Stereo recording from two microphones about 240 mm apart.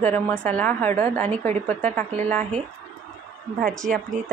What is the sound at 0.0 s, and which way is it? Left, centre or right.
A woman's voice, centre.